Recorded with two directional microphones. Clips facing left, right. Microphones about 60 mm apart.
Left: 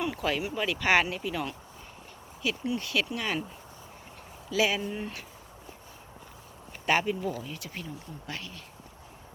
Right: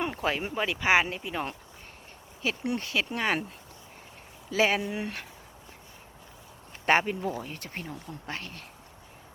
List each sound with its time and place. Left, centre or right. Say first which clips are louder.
0.0 s speech: even; right
2.4 s speech: right 1 dB; right
3.1 s speech: right 4 dB; right
4.5 s speech: right 2 dB; right
4.8 s speech: right 2 dB; right
6.8 s speech: right 2 dB; right